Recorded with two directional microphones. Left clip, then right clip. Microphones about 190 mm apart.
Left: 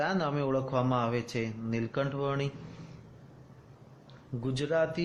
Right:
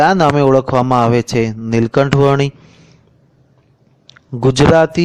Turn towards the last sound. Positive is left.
turn(degrees=-55)  # may be behind; listen again after turning